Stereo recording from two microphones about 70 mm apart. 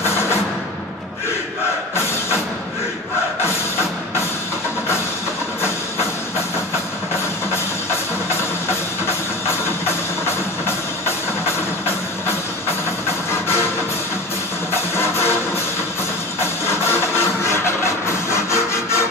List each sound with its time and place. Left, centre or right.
9.0 s music: left
15.0 s music: left
16.6 s music: left